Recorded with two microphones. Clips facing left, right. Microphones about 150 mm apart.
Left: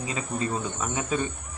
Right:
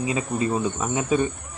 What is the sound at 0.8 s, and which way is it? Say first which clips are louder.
Speech: right 5 dB; 20° right (ahead or behind).